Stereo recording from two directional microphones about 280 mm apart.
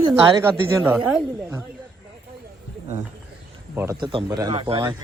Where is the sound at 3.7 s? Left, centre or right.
Centre.